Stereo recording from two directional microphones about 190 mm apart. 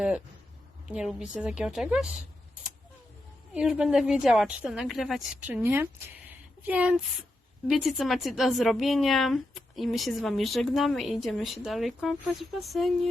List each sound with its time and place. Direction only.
0.9 s a woman's voice: 5° right (ahead or behind)
3.5 s a woman's voice: 5° right (ahead or behind)